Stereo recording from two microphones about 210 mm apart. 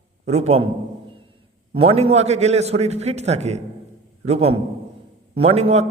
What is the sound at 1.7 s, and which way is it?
A man's voice, 30° right (ahead or behind).